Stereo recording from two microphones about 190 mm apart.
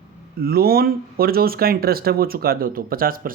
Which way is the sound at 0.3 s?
55° right (ahead or behind).